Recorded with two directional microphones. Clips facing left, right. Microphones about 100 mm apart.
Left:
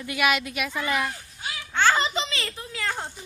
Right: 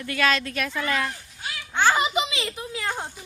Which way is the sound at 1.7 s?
15° right (ahead or behind).